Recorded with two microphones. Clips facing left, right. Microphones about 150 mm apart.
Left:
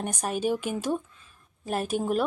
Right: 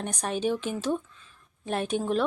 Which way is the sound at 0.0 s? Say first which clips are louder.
Even; 10° left (ahead or behind).